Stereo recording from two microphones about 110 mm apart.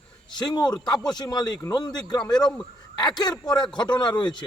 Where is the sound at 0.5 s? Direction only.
40° left (ahead or behind).